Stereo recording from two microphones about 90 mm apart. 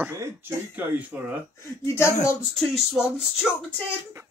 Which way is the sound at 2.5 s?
5° left (ahead or behind).